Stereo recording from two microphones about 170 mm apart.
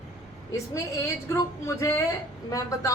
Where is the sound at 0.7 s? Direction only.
20° left (ahead or behind).